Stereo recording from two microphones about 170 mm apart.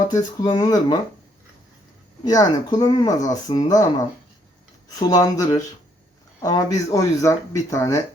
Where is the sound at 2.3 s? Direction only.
20° left (ahead or behind).